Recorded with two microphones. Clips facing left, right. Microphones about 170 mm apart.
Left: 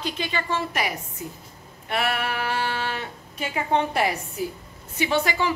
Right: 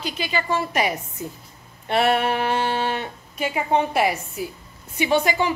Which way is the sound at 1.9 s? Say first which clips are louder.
Right 6 dB; 25° right (ahead or behind).